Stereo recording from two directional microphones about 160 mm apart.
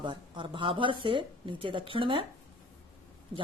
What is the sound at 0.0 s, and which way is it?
Speech, 30° right (ahead or behind).